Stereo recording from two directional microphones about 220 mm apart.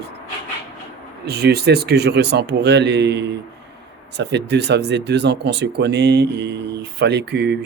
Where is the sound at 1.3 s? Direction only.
45° right (ahead or behind).